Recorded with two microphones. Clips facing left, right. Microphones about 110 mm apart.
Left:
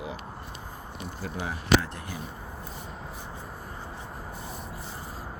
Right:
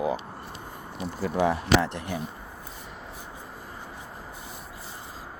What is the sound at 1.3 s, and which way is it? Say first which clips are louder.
Speech: right 3 dB; 75° right (ahead or behind).